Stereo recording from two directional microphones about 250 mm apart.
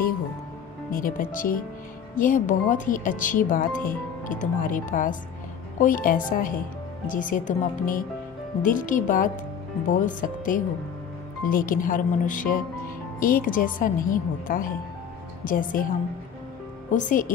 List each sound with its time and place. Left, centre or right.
0.9 s speech: left
16.9 s speech: left